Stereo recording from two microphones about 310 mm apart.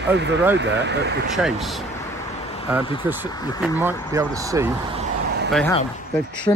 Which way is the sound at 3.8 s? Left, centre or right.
Centre.